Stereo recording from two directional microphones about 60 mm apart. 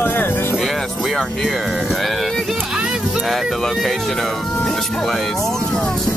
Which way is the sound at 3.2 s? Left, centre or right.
Centre.